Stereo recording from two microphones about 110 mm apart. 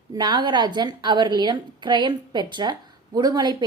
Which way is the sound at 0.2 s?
45° right (ahead or behind).